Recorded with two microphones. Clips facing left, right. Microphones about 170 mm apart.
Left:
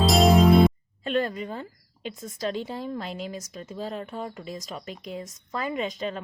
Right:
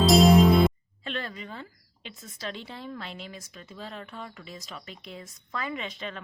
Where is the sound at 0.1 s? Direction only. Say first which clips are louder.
Even; centre (ahead or behind).